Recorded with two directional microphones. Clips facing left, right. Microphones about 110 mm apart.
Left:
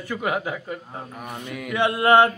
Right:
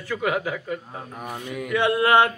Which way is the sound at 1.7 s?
20° left (ahead or behind).